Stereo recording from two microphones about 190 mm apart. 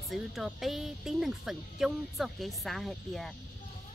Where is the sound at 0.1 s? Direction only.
Centre (ahead or behind).